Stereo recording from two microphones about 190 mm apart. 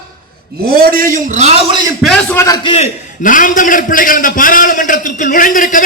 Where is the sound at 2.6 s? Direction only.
35° left (ahead or behind).